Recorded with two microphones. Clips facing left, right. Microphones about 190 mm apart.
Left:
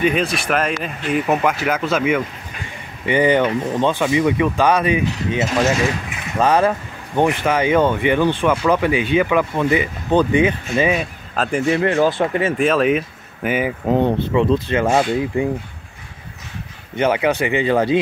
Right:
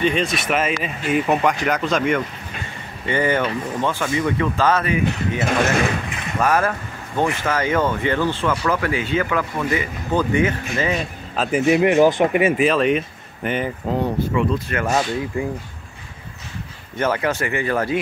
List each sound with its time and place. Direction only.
0.0 s speech: 5° left (ahead or behind)
3.1 s speech: 15° left (ahead or behind)
6.4 s speech: 20° left (ahead or behind)
11.0 s speech: centre (ahead or behind)
11.6 s speech: 15° right (ahead or behind)
12.5 s speech: centre (ahead or behind)
13.8 s speech: 25° left (ahead or behind)
16.9 s speech: 15° left (ahead or behind)